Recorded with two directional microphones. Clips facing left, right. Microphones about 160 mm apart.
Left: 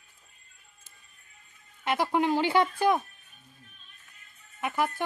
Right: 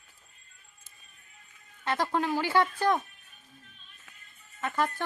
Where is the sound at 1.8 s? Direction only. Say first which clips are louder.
Left 3 dB; 15° left (ahead or behind).